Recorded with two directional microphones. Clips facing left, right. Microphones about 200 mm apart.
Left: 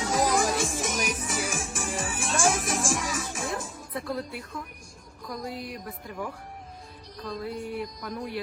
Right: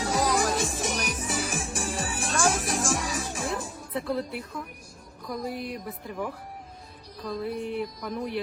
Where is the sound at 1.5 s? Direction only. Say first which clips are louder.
Right 1 dB; 35° right (ahead or behind).